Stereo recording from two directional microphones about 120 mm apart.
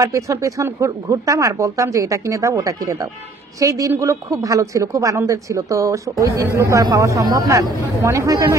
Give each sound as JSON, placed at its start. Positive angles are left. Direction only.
{"t": 0.0, "sound": "speech", "side_deg": -25}